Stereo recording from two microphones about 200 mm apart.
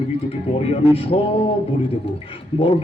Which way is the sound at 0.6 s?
30° left (ahead or behind).